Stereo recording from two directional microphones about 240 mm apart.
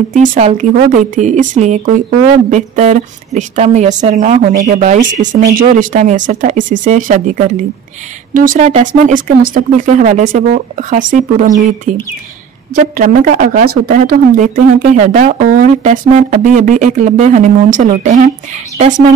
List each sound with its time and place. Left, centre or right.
0.1 s speech: right
12.9 s speech: right